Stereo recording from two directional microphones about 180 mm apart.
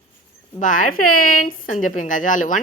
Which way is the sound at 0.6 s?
45° left (ahead or behind).